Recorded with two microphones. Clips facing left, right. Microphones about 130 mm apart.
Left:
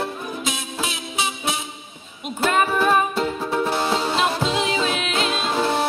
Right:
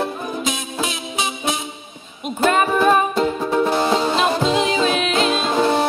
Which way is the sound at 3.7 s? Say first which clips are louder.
Right 4 dB; centre (ahead or behind).